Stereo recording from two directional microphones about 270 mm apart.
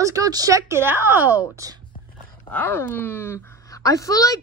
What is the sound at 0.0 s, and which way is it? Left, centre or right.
Speech, centre.